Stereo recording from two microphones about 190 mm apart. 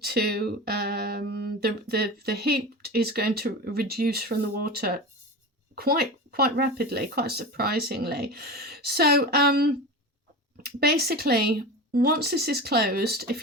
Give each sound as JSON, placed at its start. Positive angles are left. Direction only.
{"t": 0.0, "sound": "speech", "side_deg": -55}